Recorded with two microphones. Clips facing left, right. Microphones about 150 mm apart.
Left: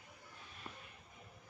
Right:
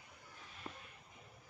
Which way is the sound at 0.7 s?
25° right (ahead or behind).